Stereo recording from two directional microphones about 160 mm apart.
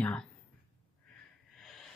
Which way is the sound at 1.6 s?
Centre (ahead or behind).